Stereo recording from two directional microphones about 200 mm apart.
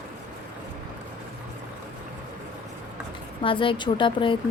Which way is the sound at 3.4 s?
25° left (ahead or behind).